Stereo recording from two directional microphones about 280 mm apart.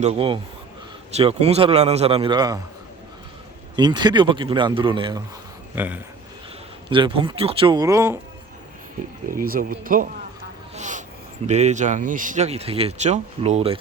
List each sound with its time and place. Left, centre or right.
0.0 s speech: right
3.8 s speech: centre
5.7 s speech: centre
6.9 s speech: centre
9.3 s speech: right
10.8 s a sound: right
11.4 s speech: right